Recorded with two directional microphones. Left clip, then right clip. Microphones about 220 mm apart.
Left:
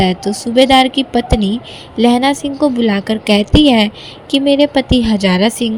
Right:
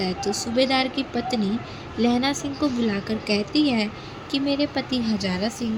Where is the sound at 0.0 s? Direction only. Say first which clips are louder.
Left 10 dB; 35° left (ahead or behind).